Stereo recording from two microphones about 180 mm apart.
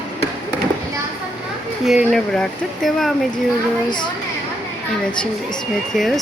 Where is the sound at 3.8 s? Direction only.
25° left (ahead or behind).